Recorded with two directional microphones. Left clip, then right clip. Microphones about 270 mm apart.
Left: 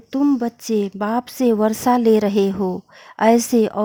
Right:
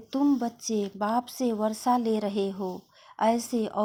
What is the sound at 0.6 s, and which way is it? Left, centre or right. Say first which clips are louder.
Speech: left 9 dB; left.